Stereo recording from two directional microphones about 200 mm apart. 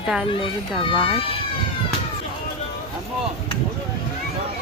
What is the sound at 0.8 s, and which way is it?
Speech, 25° left (ahead or behind).